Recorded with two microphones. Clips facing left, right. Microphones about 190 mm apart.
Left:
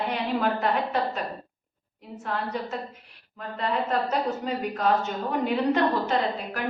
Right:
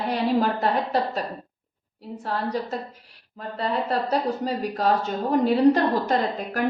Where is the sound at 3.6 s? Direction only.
35° right (ahead or behind).